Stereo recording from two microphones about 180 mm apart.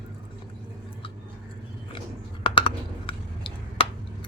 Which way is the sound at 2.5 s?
30° left (ahead or behind).